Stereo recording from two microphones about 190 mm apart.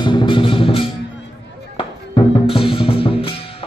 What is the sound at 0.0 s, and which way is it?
Music, 25° left (ahead or behind).